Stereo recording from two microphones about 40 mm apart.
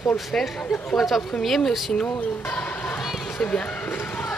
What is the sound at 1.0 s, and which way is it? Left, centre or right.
Speech, centre.